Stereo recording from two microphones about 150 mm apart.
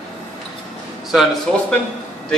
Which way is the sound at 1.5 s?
5° left (ahead or behind).